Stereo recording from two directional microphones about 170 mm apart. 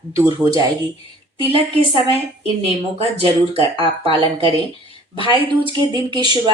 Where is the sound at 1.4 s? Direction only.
35° right (ahead or behind).